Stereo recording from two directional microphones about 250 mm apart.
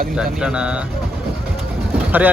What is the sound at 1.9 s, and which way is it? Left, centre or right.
Vehicle, centre.